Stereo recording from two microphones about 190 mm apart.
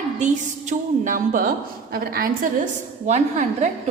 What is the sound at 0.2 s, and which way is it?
A woman's voice, 40° right (ahead or behind).